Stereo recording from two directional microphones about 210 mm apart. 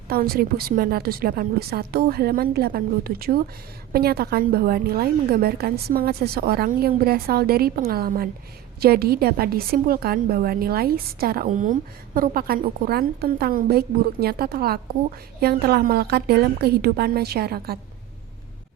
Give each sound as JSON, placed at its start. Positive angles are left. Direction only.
{"t": 0.1, "sound": "a woman's voice", "side_deg": -45}